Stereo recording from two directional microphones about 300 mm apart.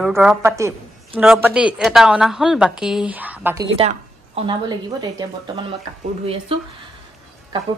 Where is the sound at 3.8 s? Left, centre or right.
Centre.